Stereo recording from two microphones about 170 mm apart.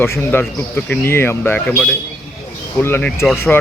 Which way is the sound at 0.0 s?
10° left (ahead or behind).